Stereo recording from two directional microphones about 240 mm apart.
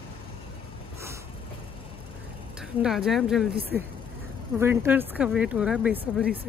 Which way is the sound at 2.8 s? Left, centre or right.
Centre.